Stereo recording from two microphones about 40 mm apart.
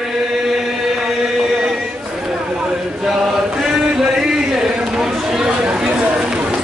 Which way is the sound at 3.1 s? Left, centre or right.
Centre.